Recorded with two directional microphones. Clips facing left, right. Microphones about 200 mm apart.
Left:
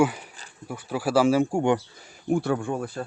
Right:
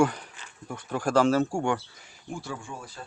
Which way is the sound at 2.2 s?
60° left (ahead or behind).